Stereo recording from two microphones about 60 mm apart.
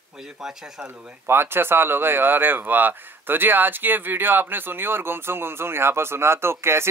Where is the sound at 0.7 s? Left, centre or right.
Right.